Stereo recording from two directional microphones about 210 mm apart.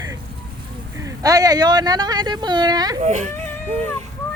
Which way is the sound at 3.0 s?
35° right (ahead or behind).